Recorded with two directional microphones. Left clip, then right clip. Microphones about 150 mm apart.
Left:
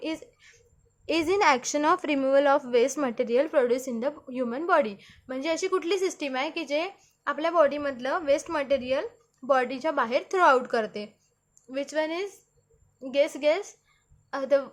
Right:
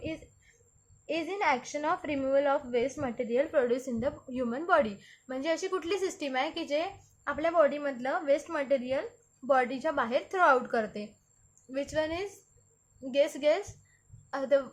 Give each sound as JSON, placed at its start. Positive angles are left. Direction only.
{"t": 1.0, "sound": "a woman's voice", "side_deg": 60}